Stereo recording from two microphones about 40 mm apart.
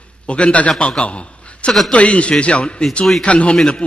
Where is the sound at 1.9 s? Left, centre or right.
Left.